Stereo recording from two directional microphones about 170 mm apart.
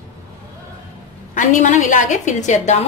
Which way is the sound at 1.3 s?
45° left (ahead or behind).